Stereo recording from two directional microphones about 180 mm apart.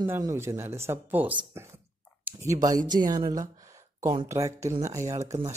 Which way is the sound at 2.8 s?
45° right (ahead or behind).